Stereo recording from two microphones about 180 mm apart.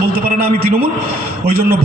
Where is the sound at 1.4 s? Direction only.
55° right (ahead or behind).